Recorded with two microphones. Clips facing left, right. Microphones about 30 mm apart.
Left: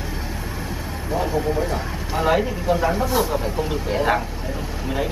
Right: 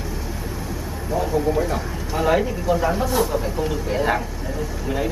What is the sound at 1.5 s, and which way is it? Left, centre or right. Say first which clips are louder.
Speech: right 1 dB; centre.